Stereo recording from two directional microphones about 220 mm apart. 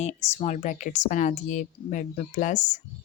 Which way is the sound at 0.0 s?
30° left (ahead or behind).